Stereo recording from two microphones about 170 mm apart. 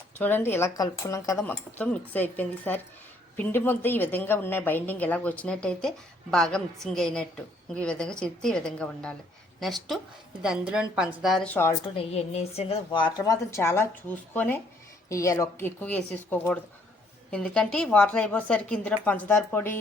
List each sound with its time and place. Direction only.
0.2 s a woman's voice: 10° left (ahead or behind)
1.5 s a woman's voice: 10° left (ahead or behind)
11.4 s a woman's voice: 10° left (ahead or behind)
11.9 s a woman's voice: 40° left (ahead or behind); by 19.7 s 10° left (ahead or behind)